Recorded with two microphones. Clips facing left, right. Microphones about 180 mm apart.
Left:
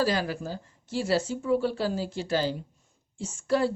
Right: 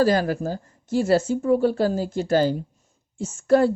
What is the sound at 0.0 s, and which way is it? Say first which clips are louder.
Speech: right 7 dB; 45° right (ahead or behind).